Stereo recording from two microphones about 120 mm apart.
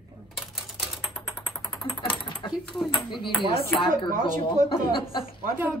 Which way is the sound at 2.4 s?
40° left (ahead or behind).